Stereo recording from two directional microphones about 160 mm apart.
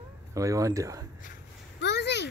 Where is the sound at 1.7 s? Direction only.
90° left.